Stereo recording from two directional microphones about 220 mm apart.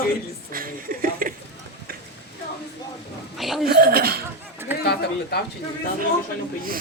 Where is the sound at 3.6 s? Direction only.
45° right (ahead or behind).